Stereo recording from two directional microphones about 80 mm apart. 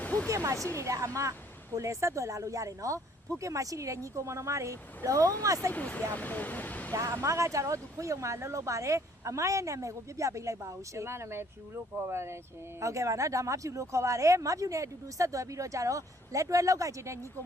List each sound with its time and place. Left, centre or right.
0.0 s a sound: left
0.3 s speech: right
5.7 s speech: centre
6.9 s speech: right